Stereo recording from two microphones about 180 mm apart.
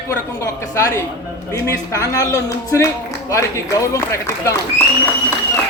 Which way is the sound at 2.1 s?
20° left (ahead or behind).